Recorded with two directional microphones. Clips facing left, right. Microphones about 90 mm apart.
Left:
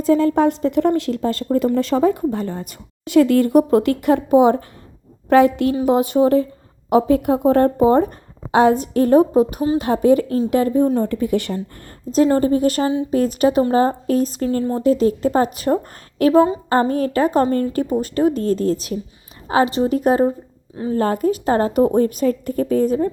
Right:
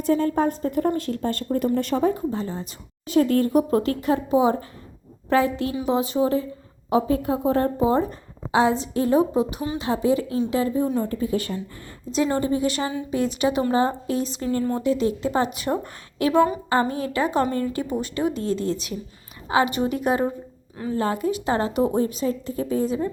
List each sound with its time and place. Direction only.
0.2 s a woman's voice: 90° left; by 11.1 s 55° left (ahead or behind)
11.1 s speech: 70° left (ahead or behind)
12.1 s a woman's voice: 45° left (ahead or behind)